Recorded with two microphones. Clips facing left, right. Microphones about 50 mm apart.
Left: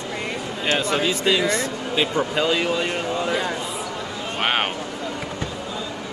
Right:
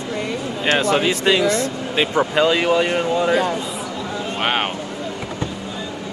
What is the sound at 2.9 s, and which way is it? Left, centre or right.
Speech, centre.